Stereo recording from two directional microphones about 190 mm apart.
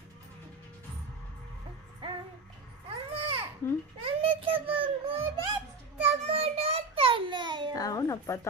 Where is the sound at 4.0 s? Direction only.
30° right (ahead or behind).